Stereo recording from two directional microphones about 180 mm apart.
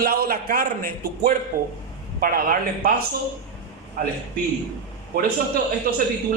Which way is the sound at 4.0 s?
50° right (ahead or behind).